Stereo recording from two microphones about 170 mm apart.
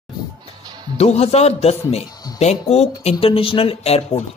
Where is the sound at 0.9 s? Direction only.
40° left (ahead or behind).